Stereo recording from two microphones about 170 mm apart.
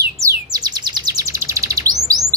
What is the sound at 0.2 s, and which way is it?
Bird, 20° right (ahead or behind).